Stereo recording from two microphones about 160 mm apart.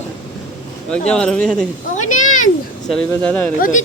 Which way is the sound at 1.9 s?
50° left (ahead or behind).